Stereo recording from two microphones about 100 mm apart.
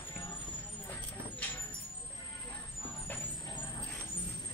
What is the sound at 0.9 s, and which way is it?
Vehicle, 20° left (ahead or behind).